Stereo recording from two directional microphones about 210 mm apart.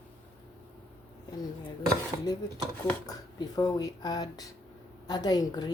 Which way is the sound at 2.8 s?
20° left (ahead or behind).